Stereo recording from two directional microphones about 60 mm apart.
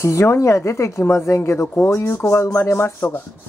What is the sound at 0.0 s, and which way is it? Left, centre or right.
A woman's voice, left.